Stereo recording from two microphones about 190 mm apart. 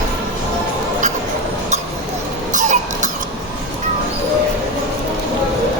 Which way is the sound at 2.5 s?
40° right (ahead or behind).